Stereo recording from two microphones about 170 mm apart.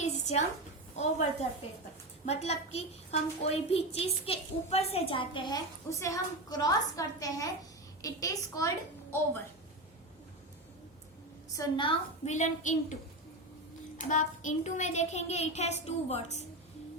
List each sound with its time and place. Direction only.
0.0 s a sound: 40° left (ahead or behind)
0.9 s a child's voice: 40° left (ahead or behind); by 8.7 s 20° left (ahead or behind)
11.5 s a woman's voice: 25° left (ahead or behind)
12.3 s a woman's voice: 45° left (ahead or behind)
14.1 s a child's voice: 45° left (ahead or behind)